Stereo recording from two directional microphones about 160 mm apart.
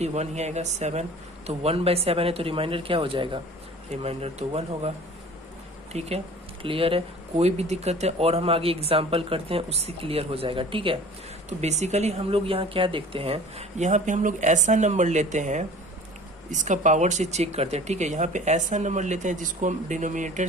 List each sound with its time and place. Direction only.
0.0 s speech: 45° right (ahead or behind)
5.9 s speech: 40° right (ahead or behind)
11.4 s speech: 45° right (ahead or behind)